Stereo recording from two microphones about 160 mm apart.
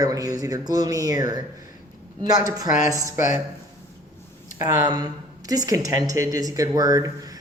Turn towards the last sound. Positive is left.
turn(degrees=-20)  # may be behind; listen again after turning